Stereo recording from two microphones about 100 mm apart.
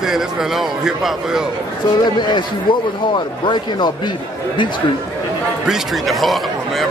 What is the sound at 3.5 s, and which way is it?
Speech, 50° left (ahead or behind).